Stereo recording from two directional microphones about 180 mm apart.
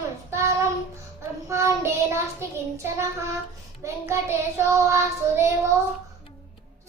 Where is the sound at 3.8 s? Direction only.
15° right (ahead or behind).